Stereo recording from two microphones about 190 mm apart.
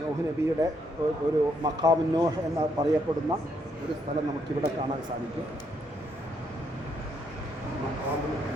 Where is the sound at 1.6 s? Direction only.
20° right (ahead or behind).